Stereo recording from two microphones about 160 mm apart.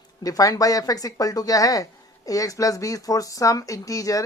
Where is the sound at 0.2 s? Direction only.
20° left (ahead or behind).